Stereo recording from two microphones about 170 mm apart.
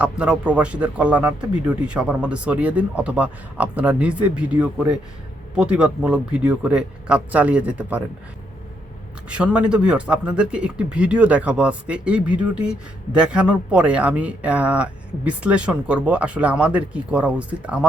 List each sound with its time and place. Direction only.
0.0 s speech: 5° right (ahead or behind)
9.3 s speech: 5° right (ahead or behind)